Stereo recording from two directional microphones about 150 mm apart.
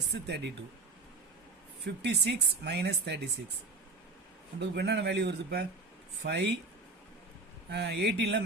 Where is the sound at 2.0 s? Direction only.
90° right.